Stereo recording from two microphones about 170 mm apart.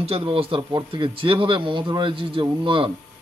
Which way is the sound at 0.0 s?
35° right (ahead or behind).